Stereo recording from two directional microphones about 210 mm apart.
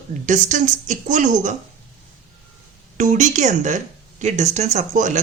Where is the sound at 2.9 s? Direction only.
35° right (ahead or behind).